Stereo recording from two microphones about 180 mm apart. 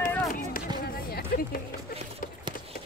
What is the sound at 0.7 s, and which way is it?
Music, 25° right (ahead or behind).